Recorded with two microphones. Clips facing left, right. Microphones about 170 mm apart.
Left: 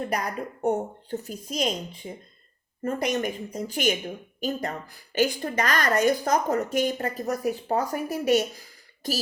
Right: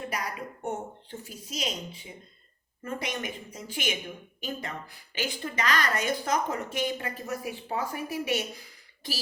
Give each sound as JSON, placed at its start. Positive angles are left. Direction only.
{"t": 0.1, "sound": "a woman's voice", "side_deg": 45}